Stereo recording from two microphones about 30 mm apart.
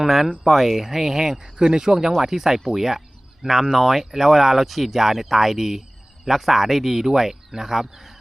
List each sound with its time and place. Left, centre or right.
0.0 s speech: centre
1.5 s speech: right; by 8.1 s centre